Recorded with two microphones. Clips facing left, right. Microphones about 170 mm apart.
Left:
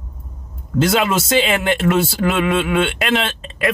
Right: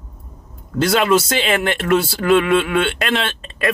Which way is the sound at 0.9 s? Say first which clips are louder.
Right 3 dB; 5° left (ahead or behind).